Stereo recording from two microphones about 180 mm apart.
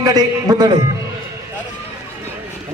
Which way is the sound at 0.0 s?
20° right (ahead or behind).